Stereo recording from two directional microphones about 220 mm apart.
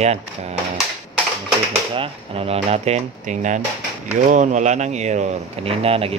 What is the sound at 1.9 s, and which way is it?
Speech, 25° right (ahead or behind).